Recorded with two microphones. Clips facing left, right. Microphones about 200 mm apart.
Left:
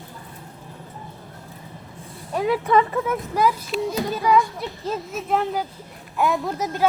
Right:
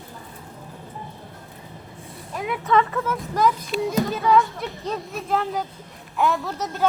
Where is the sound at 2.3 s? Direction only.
30° left (ahead or behind).